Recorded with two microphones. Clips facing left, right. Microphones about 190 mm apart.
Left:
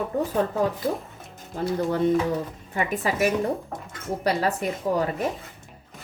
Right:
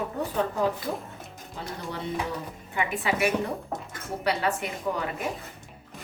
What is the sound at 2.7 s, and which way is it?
Speech, 40° left (ahead or behind).